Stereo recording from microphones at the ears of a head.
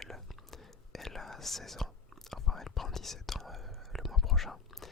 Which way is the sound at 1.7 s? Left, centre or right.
Centre.